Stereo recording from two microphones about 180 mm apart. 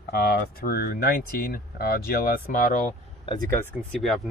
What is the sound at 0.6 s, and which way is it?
Speech, 55° left (ahead or behind).